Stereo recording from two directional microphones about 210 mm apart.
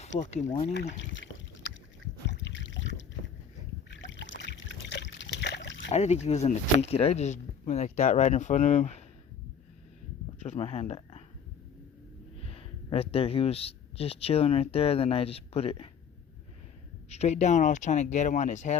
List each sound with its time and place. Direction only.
0.3 s speech: 30° left (ahead or behind)
0.9 s a sound: 60° left (ahead or behind)
2.4 s rowboat: 60° left (ahead or behind)
3.8 s trickle: 60° left (ahead or behind)
5.9 s speech: 30° left (ahead or behind)
10.4 s speech: 30° left (ahead or behind)
12.4 s speech: 30° left (ahead or behind)
17.1 s speech: 30° left (ahead or behind)